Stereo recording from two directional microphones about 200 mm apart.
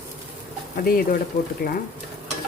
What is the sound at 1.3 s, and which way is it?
Speech, 50° left (ahead or behind).